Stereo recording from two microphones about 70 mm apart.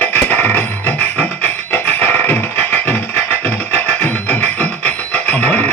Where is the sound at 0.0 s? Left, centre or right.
Left.